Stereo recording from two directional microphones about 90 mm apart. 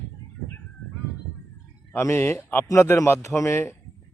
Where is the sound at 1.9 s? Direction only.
25° left (ahead or behind).